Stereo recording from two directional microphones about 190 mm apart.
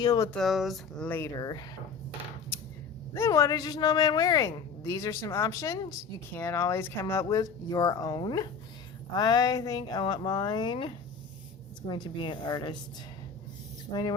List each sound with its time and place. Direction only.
0.0 s speech: 20° left (ahead or behind)
0.3 s speech: centre (ahead or behind); by 1.6 s 20° left (ahead or behind)
3.2 s speech: 15° left (ahead or behind)
13.9 s speech: 20° left (ahead or behind)